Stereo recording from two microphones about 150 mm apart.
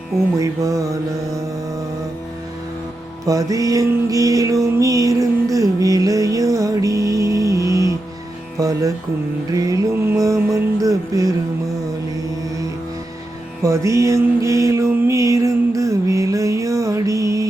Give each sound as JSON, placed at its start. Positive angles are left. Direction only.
{"t": 0.3, "sound": "music", "side_deg": -20}
{"t": 3.2, "sound": "music", "side_deg": -20}
{"t": 13.6, "sound": "music", "side_deg": -20}